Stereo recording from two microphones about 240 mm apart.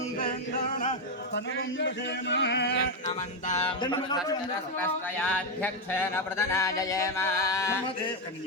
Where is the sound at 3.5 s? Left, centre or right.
Left.